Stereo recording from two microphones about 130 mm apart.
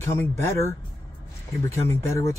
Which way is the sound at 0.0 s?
20° left (ahead or behind).